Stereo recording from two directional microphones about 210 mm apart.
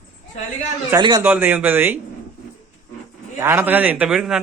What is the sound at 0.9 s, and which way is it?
A man's voice, 20° right (ahead or behind).